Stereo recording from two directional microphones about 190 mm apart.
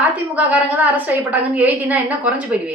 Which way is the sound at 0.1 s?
10° right (ahead or behind).